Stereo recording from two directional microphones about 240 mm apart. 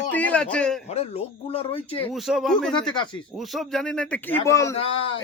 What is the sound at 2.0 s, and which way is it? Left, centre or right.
Speech, centre.